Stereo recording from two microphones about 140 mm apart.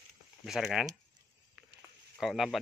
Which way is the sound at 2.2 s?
Centre (ahead or behind).